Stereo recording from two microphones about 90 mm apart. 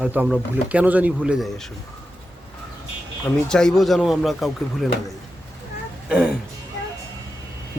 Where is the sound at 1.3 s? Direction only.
Centre (ahead or behind).